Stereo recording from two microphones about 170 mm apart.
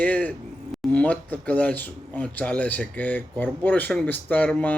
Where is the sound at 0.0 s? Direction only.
10° left (ahead or behind).